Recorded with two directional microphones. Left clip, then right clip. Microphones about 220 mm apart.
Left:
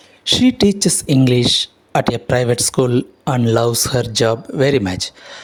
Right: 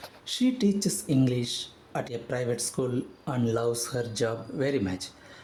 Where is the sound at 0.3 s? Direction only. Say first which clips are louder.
Left 14 dB; 35° left (ahead or behind).